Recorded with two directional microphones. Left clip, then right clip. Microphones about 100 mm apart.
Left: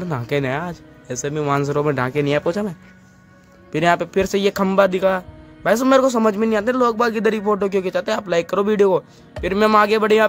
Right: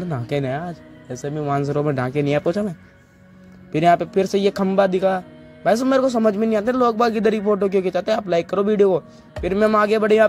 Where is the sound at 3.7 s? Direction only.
35° right (ahead or behind).